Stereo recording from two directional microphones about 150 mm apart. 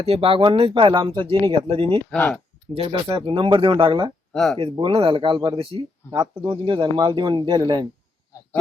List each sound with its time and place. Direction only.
0.1 s speech: 40° right (ahead or behind)
2.0 s speech: 10° left (ahead or behind)
2.7 s speech: 35° right (ahead or behind)
4.3 s speech: 5° left (ahead or behind)
4.5 s speech: 35° right (ahead or behind)